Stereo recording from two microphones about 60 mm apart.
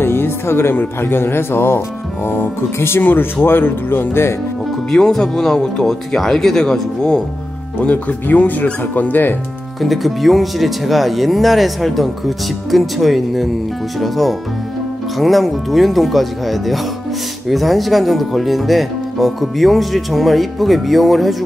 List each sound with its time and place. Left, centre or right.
0.0 s speech: left
4.9 s speech: centre
7.8 s speech: left
9.8 s speech: centre